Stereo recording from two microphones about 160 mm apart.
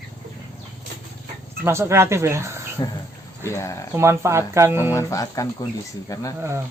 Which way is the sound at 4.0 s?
15° right (ahead or behind).